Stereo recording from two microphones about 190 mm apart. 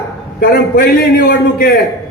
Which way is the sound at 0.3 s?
50° left (ahead or behind).